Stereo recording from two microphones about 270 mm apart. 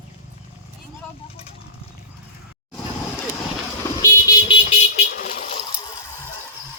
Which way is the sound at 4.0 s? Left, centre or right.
Centre.